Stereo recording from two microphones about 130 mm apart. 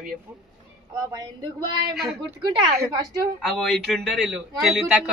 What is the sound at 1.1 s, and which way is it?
Speech, 30° right (ahead or behind).